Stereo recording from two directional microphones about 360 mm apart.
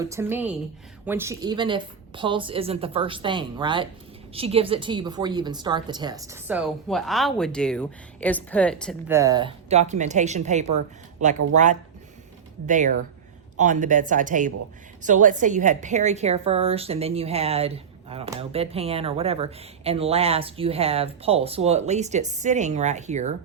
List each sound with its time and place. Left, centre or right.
0.0 s a woman's voice: centre